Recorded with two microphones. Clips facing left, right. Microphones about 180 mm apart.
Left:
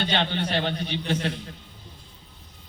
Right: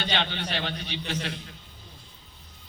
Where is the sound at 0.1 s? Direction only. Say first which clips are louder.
Left 4 dB; 50° left (ahead or behind).